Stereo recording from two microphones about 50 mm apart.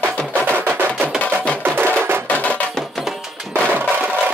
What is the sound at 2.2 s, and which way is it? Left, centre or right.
Music, left.